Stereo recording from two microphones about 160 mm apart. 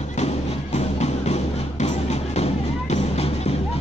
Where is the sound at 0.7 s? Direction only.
45° left (ahead or behind).